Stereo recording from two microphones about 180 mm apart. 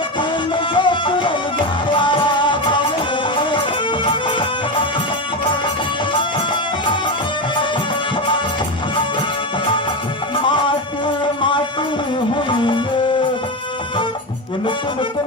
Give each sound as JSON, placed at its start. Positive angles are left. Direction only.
{"t": 0.2, "sound": "music", "side_deg": 25}
{"t": 4.0, "sound": "music", "side_deg": 25}
{"t": 10.3, "sound": "music", "side_deg": 25}
{"t": 12.5, "sound": "music", "side_deg": 25}